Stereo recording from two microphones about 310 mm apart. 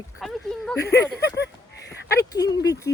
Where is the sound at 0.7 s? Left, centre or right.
Left.